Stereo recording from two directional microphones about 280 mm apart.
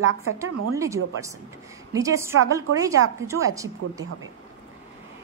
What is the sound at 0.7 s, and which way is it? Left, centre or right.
A woman's voice, centre.